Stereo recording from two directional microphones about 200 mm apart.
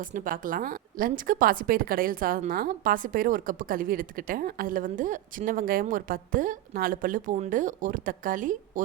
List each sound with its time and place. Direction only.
0.1 s a woman's voice: 45° right (ahead or behind)